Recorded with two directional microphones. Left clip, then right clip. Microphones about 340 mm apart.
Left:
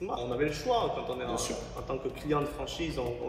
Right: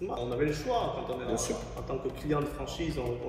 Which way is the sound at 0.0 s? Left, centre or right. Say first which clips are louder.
Even; centre.